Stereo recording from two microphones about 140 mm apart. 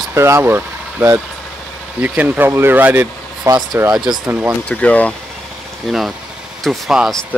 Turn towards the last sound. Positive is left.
turn(degrees=0)  # may be behind; listen again after turning